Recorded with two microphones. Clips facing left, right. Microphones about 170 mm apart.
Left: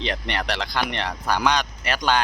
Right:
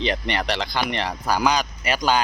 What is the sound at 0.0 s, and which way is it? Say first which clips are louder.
Speech: right 3 dB; centre (ahead or behind).